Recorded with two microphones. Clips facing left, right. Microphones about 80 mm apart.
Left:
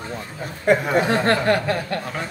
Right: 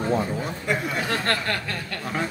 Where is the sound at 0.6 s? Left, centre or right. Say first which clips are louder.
Left 11 dB; left.